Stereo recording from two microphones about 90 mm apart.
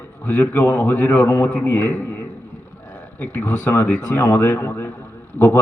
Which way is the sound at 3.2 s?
15° left (ahead or behind).